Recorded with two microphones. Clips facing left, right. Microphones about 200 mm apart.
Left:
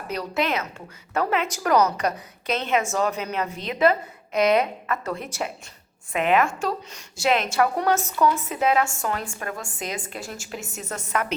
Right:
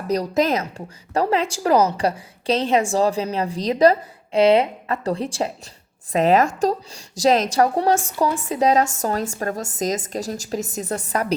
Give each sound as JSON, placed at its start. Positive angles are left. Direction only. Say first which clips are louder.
{"t": 0.1, "sound": "a woman's voice", "louder": "right 6 dB", "side_deg": -40}